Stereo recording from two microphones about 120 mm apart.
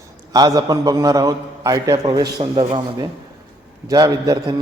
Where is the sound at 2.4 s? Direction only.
55° right (ahead or behind).